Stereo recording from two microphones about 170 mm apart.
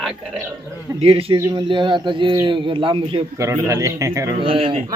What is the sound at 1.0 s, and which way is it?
Speech, 35° right (ahead or behind).